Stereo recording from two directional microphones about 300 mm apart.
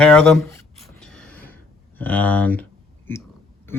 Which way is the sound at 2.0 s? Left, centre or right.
Centre.